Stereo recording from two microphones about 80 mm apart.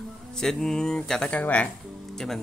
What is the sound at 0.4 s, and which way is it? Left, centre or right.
Speech, centre.